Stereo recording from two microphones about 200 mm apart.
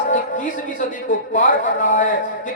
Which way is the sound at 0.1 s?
40° left (ahead or behind).